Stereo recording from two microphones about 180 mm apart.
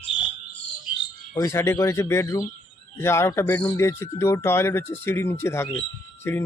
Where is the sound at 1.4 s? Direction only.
15° left (ahead or behind).